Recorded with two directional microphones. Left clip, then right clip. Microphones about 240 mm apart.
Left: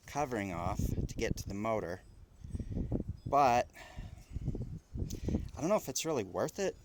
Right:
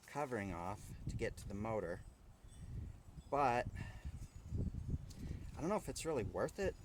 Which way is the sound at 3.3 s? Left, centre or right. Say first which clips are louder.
Left 8 dB; left.